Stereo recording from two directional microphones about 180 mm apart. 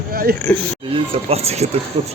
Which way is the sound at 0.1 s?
55° right (ahead or behind).